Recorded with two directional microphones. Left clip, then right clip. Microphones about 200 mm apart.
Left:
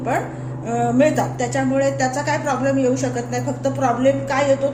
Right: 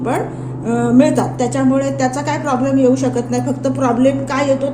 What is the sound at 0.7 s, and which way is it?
Speech, 50° right (ahead or behind).